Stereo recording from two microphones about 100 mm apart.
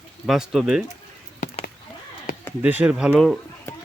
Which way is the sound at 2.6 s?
15° right (ahead or behind).